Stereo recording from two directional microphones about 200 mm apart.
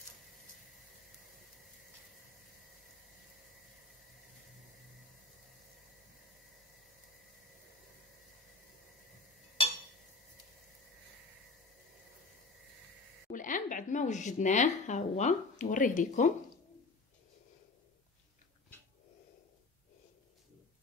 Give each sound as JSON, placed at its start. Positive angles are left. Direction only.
{"t": 13.3, "sound": "speech", "side_deg": 40}